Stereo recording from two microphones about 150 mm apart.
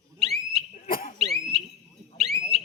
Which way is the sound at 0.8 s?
70° left (ahead or behind).